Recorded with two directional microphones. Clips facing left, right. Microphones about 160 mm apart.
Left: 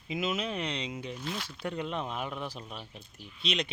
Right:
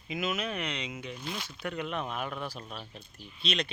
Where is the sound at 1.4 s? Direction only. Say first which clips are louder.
Left 1 dB; 30° left (ahead or behind).